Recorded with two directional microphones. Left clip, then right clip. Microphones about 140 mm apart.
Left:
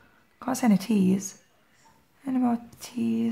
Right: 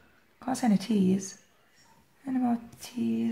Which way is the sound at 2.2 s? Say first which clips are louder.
Left 3 dB; 35° left (ahead or behind).